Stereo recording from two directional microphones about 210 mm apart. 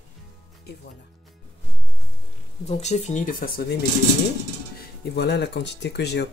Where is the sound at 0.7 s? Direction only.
50° left (ahead or behind).